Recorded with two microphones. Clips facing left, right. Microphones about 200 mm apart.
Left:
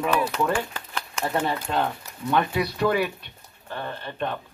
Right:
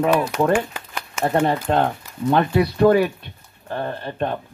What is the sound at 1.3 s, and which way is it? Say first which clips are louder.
Speech: right 7 dB; 55° right (ahead or behind).